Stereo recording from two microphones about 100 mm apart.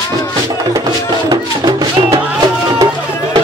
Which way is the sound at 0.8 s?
45° right (ahead or behind).